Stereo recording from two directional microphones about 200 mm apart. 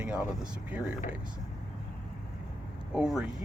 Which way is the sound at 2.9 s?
5° right (ahead or behind).